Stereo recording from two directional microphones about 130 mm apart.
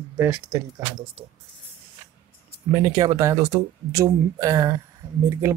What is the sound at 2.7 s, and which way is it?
Speech, 25° right (ahead or behind).